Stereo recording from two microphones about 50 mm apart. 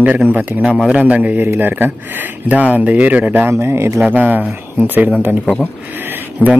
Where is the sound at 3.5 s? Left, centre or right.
Right.